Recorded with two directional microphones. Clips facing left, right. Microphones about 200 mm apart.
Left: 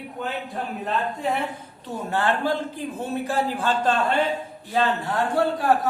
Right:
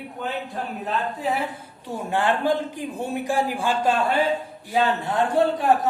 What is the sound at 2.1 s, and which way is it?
A man's voice, 15° right (ahead or behind).